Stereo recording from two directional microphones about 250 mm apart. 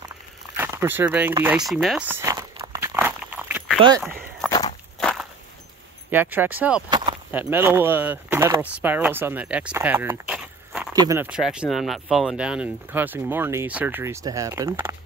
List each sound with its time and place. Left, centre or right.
0.6 s a sound: centre
4.5 s walk: centre
6.0 s speech: centre